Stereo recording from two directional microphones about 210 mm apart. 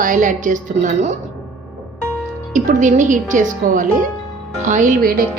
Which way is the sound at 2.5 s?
35° right (ahead or behind).